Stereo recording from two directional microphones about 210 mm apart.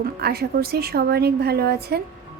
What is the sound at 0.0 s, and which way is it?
A woman's voice, 50° right (ahead or behind).